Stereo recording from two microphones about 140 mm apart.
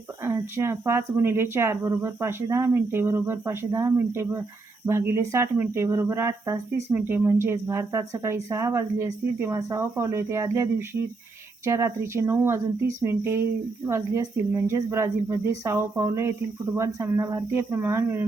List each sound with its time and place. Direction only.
0.2 s speech: 20° right (ahead or behind)
13.8 s speech: 20° right (ahead or behind)